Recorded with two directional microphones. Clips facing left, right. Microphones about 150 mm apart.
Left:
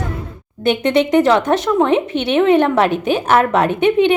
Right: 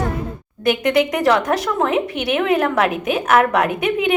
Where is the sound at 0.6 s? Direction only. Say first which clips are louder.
Left 2 dB; 25° left (ahead or behind).